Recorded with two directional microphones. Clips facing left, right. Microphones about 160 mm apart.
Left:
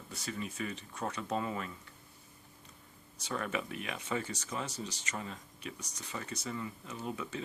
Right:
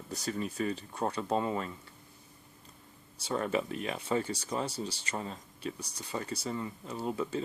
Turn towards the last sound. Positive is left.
turn(degrees=-35)  # may be behind; listen again after turning